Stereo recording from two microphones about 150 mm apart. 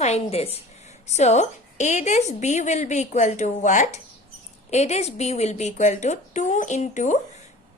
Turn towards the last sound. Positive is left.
turn(degrees=55)  # may be behind; listen again after turning